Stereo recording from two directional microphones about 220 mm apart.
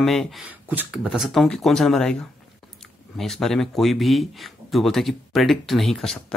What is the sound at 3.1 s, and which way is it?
Speech, centre (ahead or behind).